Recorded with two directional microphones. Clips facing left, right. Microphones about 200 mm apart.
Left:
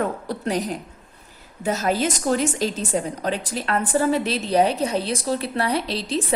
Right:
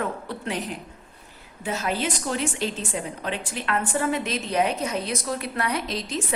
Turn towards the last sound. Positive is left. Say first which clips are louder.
# left 4 dB
turn(degrees=30)  # may be behind; listen again after turning